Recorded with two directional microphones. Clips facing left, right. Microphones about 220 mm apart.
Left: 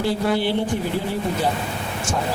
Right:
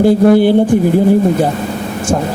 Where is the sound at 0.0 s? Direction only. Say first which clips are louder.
Right 13 dB; 50° right (ahead or behind).